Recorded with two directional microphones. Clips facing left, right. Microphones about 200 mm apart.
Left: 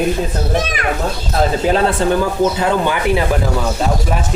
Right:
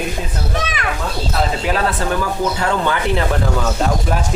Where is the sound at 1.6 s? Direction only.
25° left (ahead or behind).